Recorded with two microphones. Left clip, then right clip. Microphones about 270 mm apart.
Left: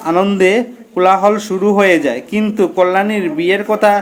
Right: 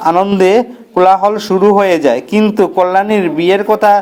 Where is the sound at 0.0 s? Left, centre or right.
Centre.